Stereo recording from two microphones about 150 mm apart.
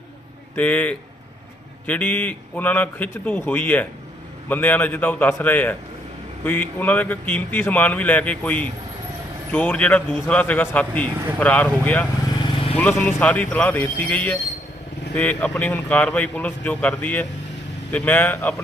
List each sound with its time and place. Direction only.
0.5 s speech: 10° left (ahead or behind)
12.4 s vehicle: 35° left (ahead or behind)
12.7 s speech: 10° left (ahead or behind)